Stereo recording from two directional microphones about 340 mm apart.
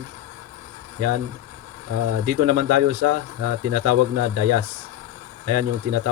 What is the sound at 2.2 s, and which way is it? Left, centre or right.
Speech, right.